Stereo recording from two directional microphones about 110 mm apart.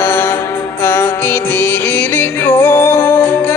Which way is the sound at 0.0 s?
25° left (ahead or behind).